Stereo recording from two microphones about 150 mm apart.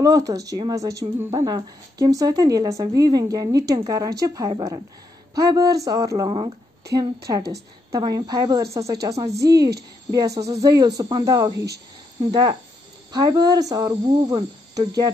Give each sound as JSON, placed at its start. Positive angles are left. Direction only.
{"t": 0.0, "sound": "a woman's voice", "side_deg": -25}
{"t": 6.2, "sound": "a woman's voice", "side_deg": -35}